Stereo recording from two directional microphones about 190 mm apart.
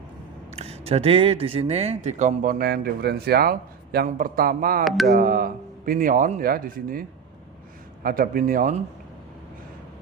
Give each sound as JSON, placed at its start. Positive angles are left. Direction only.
{"t": 0.5, "sound": "speech", "side_deg": -35}
{"t": 4.9, "sound": "music", "side_deg": 0}
{"t": 5.1, "sound": "speech", "side_deg": -50}
{"t": 8.0, "sound": "speech", "side_deg": -50}